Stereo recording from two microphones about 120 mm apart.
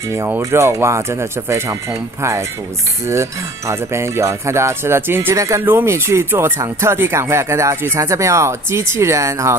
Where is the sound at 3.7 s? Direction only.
20° right (ahead or behind).